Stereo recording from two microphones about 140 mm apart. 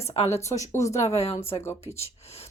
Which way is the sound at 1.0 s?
50° left (ahead or behind).